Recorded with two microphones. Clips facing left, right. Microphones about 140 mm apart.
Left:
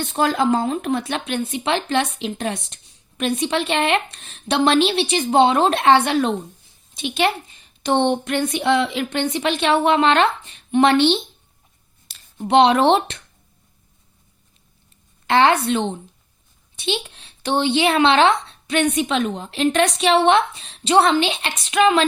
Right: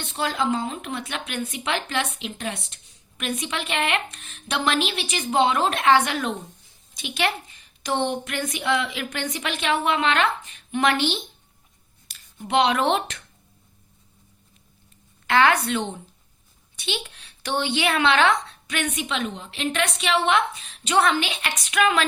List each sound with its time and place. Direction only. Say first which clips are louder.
0.1 s a woman's voice: left 6 dB; 45° left (ahead or behind); by 13.1 s 30° left (ahead or behind)
15.3 s a woman's voice: left 4 dB; 25° left (ahead or behind)